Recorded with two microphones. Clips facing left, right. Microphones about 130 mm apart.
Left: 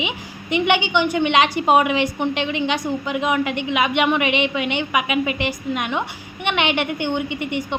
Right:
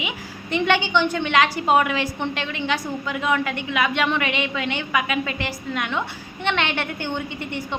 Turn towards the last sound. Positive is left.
turn(degrees=15)  # may be behind; listen again after turning